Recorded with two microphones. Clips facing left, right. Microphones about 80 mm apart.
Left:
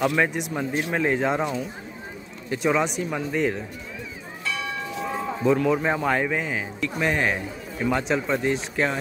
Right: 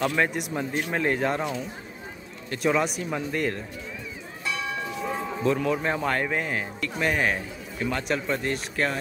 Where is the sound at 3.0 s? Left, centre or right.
Centre.